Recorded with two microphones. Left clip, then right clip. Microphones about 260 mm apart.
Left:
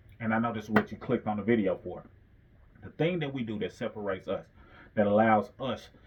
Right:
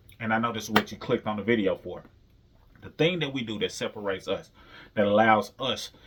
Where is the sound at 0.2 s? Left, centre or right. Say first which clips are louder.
Right 4 dB; centre.